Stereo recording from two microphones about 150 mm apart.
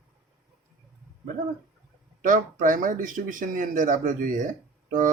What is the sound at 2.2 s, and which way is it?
Speech, 65° right (ahead or behind).